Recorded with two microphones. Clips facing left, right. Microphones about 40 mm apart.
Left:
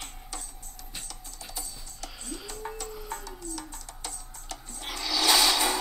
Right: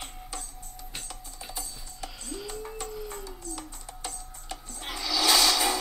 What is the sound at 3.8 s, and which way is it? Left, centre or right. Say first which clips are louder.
Music: right 2 dB; right.